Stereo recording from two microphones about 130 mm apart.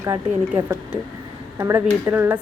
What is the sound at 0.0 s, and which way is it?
A woman's voice, 20° right (ahead or behind).